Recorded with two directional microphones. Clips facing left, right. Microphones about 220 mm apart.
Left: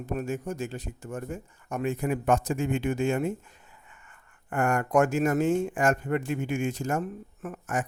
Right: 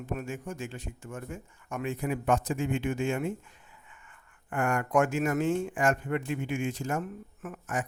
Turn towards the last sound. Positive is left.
turn(degrees=45)  # may be behind; listen again after turning